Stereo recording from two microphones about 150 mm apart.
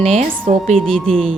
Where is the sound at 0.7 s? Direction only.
5° left (ahead or behind).